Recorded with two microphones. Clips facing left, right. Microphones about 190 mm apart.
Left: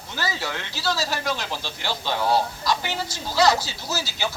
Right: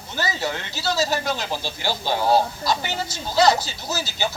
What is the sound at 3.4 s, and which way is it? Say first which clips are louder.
Speech: right 2 dB; 20° right (ahead or behind).